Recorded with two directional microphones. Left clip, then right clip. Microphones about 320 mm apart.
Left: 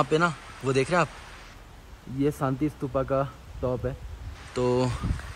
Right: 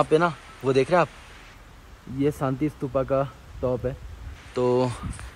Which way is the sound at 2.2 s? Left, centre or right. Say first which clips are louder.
Right 2 dB; centre.